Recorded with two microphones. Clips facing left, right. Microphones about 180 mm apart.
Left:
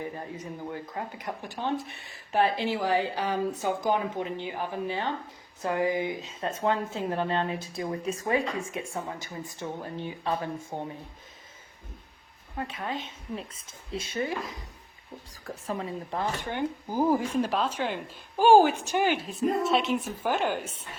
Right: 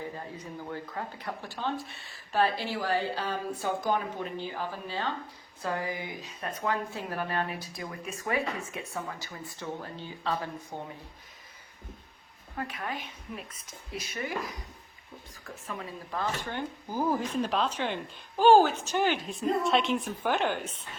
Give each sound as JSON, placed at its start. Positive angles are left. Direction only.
{"t": 0.7, "sound": "speech", "side_deg": 20}
{"t": 12.5, "sound": "speech", "side_deg": 25}
{"t": 16.1, "sound": "speech", "side_deg": 15}